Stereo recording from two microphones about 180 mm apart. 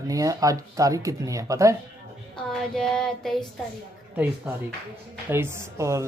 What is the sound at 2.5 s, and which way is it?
Child singing, 5° left (ahead or behind).